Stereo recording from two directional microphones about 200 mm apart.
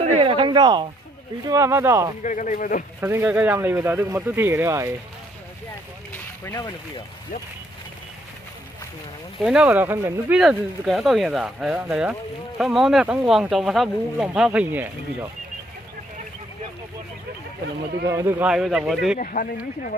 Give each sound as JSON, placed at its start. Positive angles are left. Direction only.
{"t": 0.2, "sound": "a sound", "side_deg": -25}
{"t": 1.5, "sound": "speech", "side_deg": -15}
{"t": 2.2, "sound": "a man's voice", "side_deg": 40}
{"t": 3.0, "sound": "speech", "side_deg": -10}
{"t": 6.4, "sound": "speech", "side_deg": 20}
{"t": 9.4, "sound": "speech", "side_deg": -5}
{"t": 18.0, "sound": "speech", "side_deg": -15}
{"t": 19.1, "sound": "speech", "side_deg": 45}